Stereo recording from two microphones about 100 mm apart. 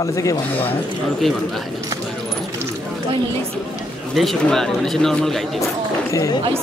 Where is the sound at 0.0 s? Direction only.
35° left (ahead or behind).